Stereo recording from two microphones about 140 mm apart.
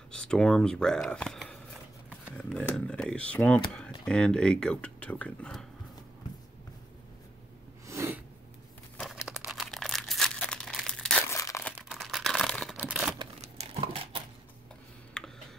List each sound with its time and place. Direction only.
0.1 s speech: 5° left (ahead or behind)
7.8 s snort: 20° right (ahead or behind)
9.0 s tearing: 5° right (ahead or behind)
11.2 s crumpling: 20° left (ahead or behind)
11.7 s a sound: centre (ahead or behind)
12.7 s tearing: 10° right (ahead or behind)
13.4 s a sound: 50° right (ahead or behind)
15.1 s computer keyboard: 5° left (ahead or behind)